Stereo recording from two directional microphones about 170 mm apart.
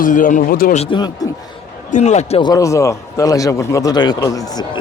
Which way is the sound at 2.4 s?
20° left (ahead or behind).